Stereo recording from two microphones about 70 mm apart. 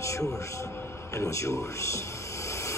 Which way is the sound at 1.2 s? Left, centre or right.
Left.